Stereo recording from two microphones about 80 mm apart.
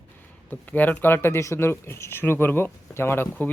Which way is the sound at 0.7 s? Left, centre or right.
Left.